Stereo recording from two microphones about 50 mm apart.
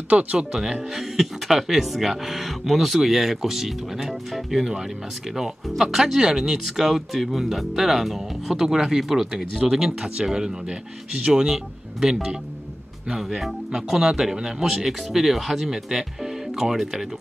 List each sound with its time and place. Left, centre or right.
0.1 s speech: right
0.4 s speech: centre